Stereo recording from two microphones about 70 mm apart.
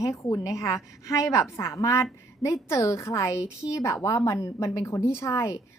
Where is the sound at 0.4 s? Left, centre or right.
Left.